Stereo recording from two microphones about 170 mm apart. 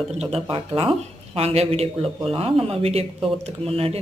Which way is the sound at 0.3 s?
35° right (ahead or behind).